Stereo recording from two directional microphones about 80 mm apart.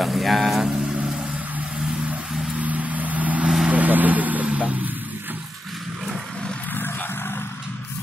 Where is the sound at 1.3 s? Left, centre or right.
Centre.